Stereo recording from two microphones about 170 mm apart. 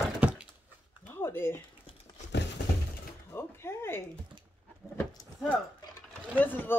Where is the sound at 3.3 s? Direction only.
15° left (ahead or behind).